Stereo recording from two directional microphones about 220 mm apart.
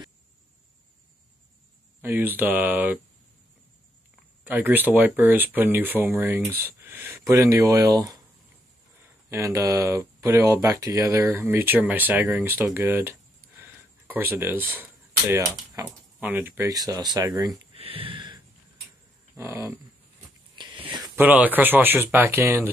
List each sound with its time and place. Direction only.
2.0 s speech: 10° right (ahead or behind)
4.5 s speech: 10° right (ahead or behind)
9.3 s speech: 15° right (ahead or behind)
13.6 s a sound: 10° right (ahead or behind)
15.7 s speech: 10° right (ahead or behind)
19.3 s dog: 10° right (ahead or behind)
20.5 s a sound: 20° right (ahead or behind)
21.2 s speech: 10° right (ahead or behind)